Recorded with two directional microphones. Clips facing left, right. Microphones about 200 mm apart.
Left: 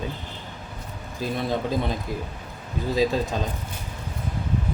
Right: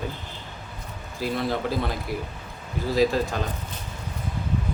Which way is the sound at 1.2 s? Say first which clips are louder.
Even; 20° left (ahead or behind).